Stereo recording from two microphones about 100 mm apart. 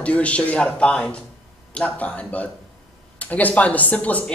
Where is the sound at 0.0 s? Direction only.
15° left (ahead or behind).